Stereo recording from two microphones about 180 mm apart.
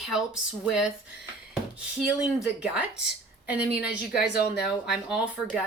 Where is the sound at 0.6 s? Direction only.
5° right (ahead or behind).